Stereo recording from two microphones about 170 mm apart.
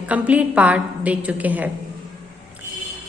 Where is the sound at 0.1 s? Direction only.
10° right (ahead or behind).